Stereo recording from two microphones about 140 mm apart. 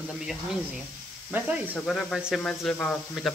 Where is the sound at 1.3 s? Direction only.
10° right (ahead or behind).